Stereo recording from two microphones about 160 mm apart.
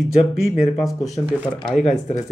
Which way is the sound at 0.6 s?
Centre (ahead or behind).